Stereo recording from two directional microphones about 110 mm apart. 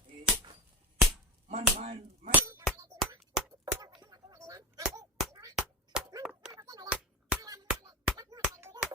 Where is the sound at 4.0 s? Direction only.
35° right (ahead or behind).